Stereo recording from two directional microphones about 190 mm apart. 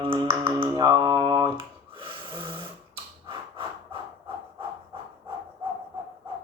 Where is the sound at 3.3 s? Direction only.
25° right (ahead or behind).